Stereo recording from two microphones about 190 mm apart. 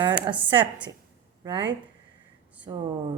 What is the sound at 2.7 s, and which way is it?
Speech, 20° right (ahead or behind).